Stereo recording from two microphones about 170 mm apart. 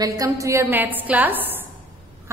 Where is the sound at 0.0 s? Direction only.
20° right (ahead or behind).